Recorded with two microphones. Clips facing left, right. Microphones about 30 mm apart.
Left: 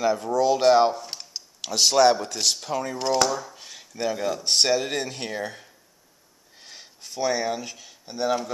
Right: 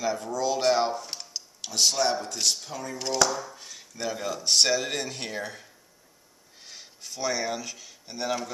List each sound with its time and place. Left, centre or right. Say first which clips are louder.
0.0 s speech: left 5 dB; left
0.4 s speech: left 6 dB; left
1.6 s speech: left 6 dB; left
3.0 s speech: left 2 dB; centre
3.5 s a sound: left 2 dB; left
4.0 s speech: left 5 dB; centre